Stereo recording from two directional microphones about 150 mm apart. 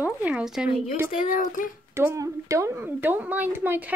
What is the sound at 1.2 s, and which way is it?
Speech, 65° left (ahead or behind).